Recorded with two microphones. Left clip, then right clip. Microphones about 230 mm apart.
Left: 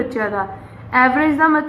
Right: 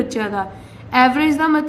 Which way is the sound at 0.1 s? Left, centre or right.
Right.